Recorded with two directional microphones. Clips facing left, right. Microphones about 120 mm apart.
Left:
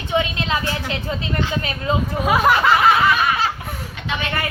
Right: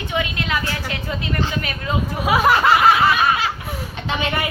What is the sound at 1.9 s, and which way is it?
Speech, 30° left (ahead or behind).